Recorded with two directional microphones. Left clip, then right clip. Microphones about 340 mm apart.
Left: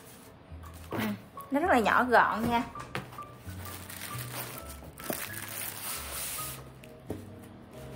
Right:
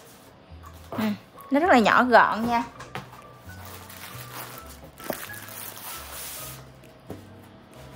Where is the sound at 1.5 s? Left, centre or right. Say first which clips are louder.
Right 7 dB; right.